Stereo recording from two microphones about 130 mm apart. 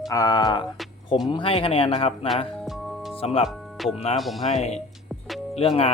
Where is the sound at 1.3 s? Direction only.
40° left (ahead or behind).